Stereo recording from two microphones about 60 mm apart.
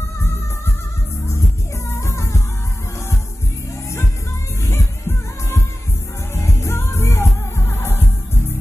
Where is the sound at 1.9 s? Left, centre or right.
Left.